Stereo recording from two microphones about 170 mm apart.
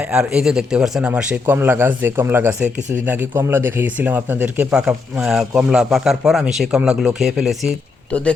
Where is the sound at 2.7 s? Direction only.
45° right (ahead or behind).